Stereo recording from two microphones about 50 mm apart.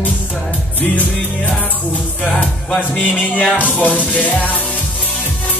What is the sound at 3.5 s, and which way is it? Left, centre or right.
Music, left.